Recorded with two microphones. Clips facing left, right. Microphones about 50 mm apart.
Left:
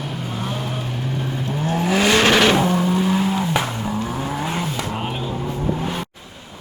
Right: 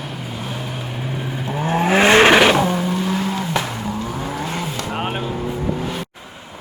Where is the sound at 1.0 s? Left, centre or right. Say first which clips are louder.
Right 1 dB; centre.